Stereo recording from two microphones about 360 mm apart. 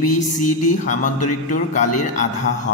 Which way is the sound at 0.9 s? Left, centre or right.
Left.